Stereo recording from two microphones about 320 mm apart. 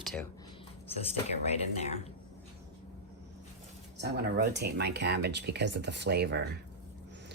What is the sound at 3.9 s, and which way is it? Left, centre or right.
Speech, right.